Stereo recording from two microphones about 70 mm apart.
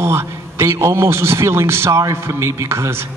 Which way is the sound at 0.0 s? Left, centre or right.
Right.